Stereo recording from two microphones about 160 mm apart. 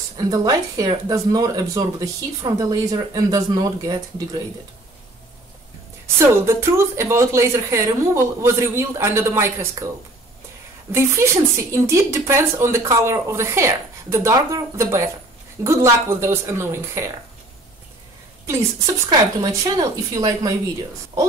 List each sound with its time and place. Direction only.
0.2 s speech: 20° right (ahead or behind)
6.1 s a woman's voice: 15° right (ahead or behind)
10.9 s a woman's voice: 15° right (ahead or behind)
19.0 s speech: 25° right (ahead or behind)